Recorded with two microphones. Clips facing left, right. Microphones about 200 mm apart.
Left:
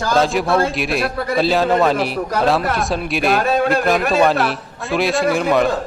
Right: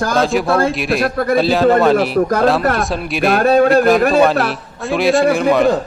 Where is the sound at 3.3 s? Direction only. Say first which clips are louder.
Right 5 dB; 50° right (ahead or behind).